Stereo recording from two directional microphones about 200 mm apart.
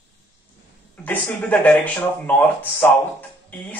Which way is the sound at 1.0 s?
10° left (ahead or behind).